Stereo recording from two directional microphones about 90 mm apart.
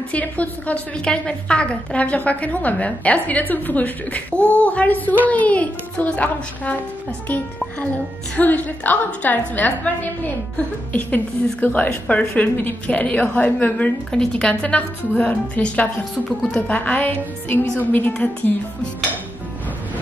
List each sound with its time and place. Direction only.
0.1 s a woman's voice: 15° left (ahead or behind)
10.9 s a woman's voice: 15° left (ahead or behind)